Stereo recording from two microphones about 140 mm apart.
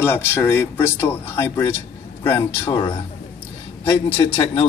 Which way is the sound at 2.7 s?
40° left (ahead or behind).